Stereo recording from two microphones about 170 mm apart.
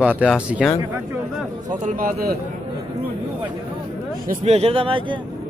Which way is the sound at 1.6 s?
50° right (ahead or behind).